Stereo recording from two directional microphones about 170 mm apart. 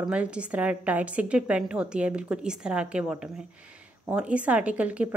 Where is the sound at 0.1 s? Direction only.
5° right (ahead or behind).